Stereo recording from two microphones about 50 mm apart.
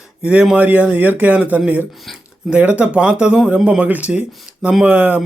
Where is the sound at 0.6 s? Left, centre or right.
Right.